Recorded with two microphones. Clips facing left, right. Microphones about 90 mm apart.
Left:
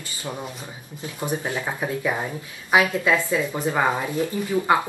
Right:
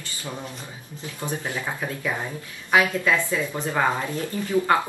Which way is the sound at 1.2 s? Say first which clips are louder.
Left 3 dB; 15° left (ahead or behind).